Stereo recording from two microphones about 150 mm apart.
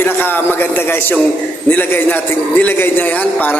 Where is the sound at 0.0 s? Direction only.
15° left (ahead or behind).